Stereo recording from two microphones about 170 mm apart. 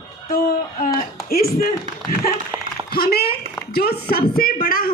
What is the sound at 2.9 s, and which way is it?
A woman's voice, 65° left (ahead or behind).